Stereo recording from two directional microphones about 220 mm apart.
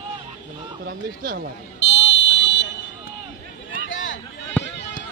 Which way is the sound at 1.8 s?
55° left (ahead or behind).